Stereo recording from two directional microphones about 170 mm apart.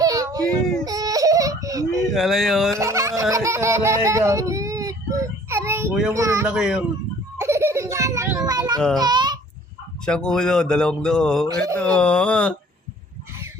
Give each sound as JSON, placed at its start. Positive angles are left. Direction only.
{"t": 0.0, "sound": "a sound", "side_deg": -20}
{"t": 0.9, "sound": "whimper", "side_deg": -20}
{"t": 2.0, "sound": "speech", "side_deg": 0}
{"t": 2.7, "sound": "music", "side_deg": -15}
{"t": 6.1, "sound": "speech", "side_deg": -20}
{"t": 6.5, "sound": "speech", "side_deg": -5}
{"t": 7.3, "sound": "baby laughter", "side_deg": -15}
{"t": 8.4, "sound": "a sound", "side_deg": -25}
{"t": 9.0, "sound": "a child's voice", "side_deg": -25}
{"t": 10.1, "sound": "speech", "side_deg": 5}